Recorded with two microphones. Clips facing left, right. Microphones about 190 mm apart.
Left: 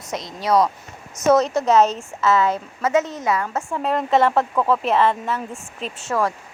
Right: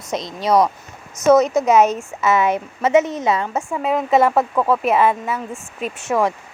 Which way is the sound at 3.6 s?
5° right (ahead or behind).